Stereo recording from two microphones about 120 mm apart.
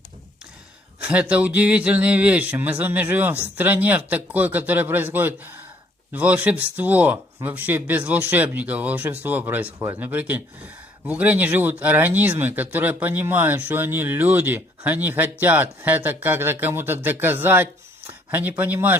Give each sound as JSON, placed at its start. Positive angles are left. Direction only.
{"t": 1.0, "sound": "speech", "side_deg": -10}